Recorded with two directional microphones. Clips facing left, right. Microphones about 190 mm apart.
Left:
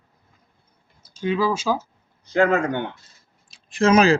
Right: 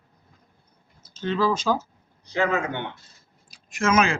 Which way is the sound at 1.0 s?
10° left (ahead or behind).